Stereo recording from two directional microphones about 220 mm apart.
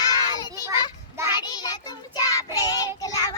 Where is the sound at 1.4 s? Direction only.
20° left (ahead or behind).